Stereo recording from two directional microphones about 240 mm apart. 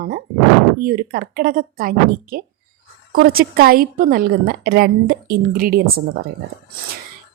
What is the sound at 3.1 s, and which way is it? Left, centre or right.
A woman's voice, right.